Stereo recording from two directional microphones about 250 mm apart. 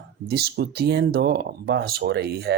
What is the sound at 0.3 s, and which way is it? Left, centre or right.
Speech, right.